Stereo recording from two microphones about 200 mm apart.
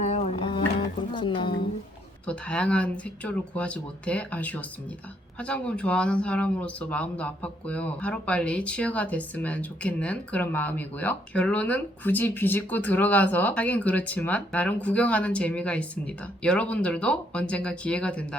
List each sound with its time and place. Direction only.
0.0 s music: 35° left (ahead or behind)
1.1 s a woman's voice: 25° left (ahead or behind)
2.2 s speech: 5° left (ahead or behind)